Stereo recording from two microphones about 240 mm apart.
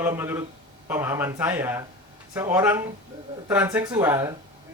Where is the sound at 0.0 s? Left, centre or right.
Centre.